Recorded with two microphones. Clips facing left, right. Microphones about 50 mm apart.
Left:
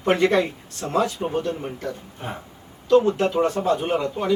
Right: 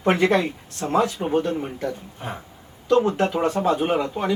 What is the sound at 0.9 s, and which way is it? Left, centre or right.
Speech, centre.